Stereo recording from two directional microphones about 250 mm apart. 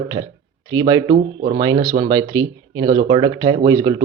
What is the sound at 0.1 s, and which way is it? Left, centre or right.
Speech, centre.